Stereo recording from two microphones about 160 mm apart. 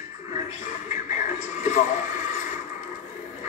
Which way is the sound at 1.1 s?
50° left (ahead or behind).